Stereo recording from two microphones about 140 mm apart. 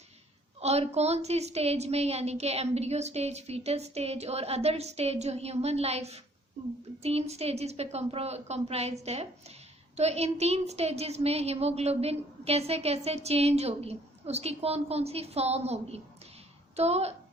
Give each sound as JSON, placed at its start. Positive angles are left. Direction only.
{"t": 0.6, "sound": "a woman's voice", "side_deg": -50}